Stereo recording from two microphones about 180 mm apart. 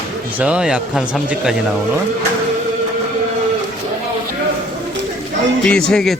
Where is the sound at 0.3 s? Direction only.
5° right (ahead or behind).